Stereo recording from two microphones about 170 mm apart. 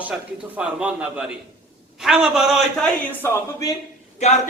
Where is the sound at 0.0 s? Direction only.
5° right (ahead or behind).